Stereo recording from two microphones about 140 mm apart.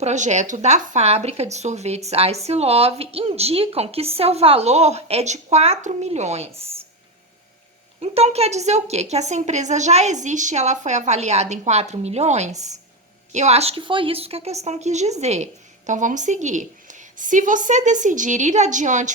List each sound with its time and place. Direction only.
0.0 s speech: 55° right (ahead or behind)
8.0 s a woman's voice: 45° right (ahead or behind)